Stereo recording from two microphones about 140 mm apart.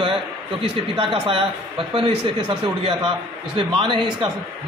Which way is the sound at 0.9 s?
40° right (ahead or behind).